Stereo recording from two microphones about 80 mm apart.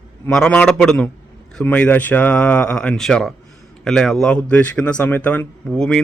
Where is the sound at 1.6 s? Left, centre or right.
Centre.